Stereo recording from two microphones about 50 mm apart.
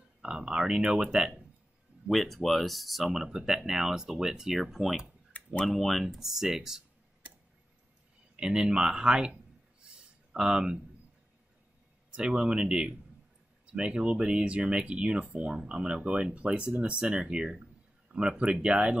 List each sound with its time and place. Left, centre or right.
0.2 s speech: centre
2.0 s speech: centre
3.1 s speech: centre
5.3 s tick-tock: left
5.7 s speech: centre
8.4 s speech: centre
10.3 s speech: centre
12.1 s speech: centre